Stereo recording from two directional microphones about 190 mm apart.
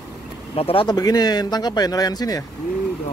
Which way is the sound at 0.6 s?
30° left (ahead or behind).